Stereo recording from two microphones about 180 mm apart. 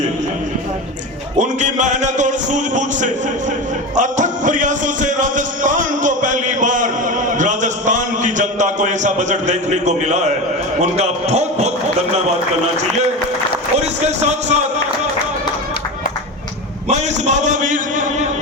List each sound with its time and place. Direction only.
1.4 s a man's voice: 45° right (ahead or behind)
3.9 s music: 45° right (ahead or behind)
10.8 s a man's voice: 40° right (ahead or behind)
13.7 s a man's voice: 40° right (ahead or behind)
16.9 s a sound: 40° right (ahead or behind)